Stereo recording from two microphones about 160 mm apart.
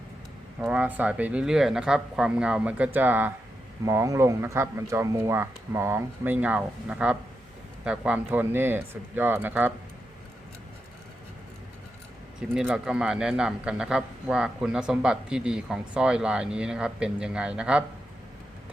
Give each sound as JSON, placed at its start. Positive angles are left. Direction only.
{"t": 0.6, "sound": "speech", "side_deg": -10}
{"t": 12.4, "sound": "a man's voice", "side_deg": -5}